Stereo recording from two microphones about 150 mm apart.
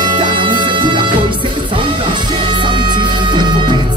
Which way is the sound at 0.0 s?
30° right (ahead or behind).